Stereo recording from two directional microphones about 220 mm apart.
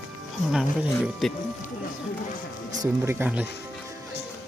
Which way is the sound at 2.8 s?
10° right (ahead or behind).